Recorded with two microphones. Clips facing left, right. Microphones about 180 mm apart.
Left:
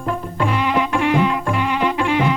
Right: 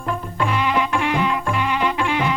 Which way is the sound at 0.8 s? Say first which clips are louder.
Left 3 dB; 45° left (ahead or behind).